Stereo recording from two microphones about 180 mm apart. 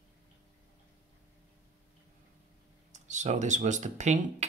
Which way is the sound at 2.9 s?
40° right (ahead or behind).